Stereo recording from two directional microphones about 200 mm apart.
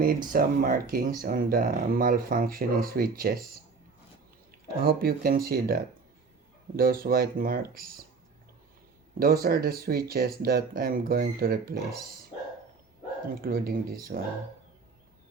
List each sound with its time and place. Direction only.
0.3 s speech: 45° right (ahead or behind)
4.8 s speech: 50° right (ahead or behind)
9.1 s speech: 50° right (ahead or behind)
13.4 s speech: 50° right (ahead or behind)